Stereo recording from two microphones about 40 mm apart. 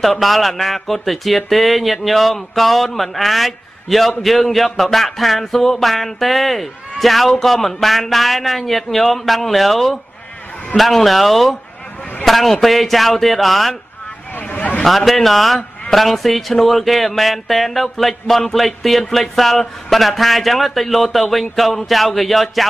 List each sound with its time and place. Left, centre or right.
0.0 s speech: centre
14.3 s vehicle: left
14.9 s speech: centre